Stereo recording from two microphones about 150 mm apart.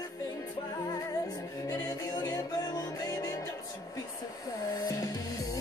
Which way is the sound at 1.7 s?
25° left (ahead or behind).